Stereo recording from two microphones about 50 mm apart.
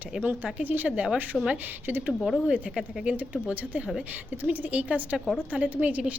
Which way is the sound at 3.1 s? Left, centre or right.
Right.